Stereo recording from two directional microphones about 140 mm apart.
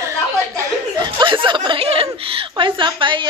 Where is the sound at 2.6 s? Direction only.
35° right (ahead or behind).